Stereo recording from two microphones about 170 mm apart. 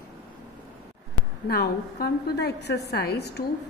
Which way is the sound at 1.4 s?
65° left (ahead or behind).